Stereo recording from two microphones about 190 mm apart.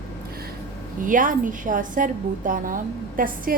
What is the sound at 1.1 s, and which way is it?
A woman's voice, 45° right (ahead or behind).